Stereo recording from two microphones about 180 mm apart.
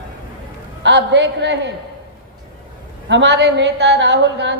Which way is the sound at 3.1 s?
85° right.